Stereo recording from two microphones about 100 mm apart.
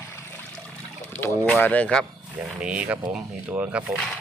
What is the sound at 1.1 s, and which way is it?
Speech, 20° left (ahead or behind).